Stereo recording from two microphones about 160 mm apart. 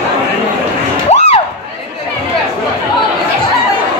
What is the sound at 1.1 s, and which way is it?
Crowd, 40° left (ahead or behind).